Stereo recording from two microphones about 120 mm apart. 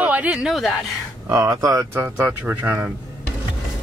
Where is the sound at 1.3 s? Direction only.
30° right (ahead or behind).